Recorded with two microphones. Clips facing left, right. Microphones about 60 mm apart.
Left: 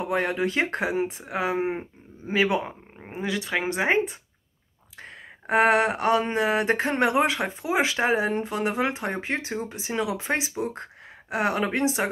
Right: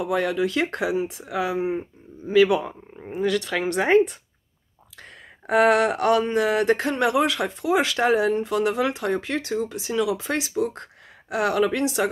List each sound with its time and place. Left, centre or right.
0.0 s speech: left
3.2 s speech: centre
5.5 s speech: left